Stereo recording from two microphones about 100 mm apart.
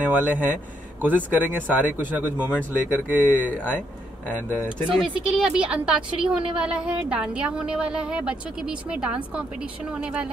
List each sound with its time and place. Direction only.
0.0 s a woman's voice: 15° right (ahead or behind)
5.2 s a woman's voice: 5° right (ahead or behind)